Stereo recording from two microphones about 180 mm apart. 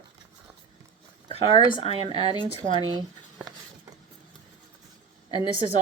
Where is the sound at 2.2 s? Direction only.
30° right (ahead or behind).